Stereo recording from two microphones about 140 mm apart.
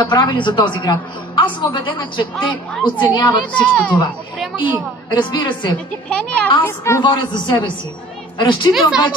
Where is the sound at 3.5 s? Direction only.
10° left (ahead or behind).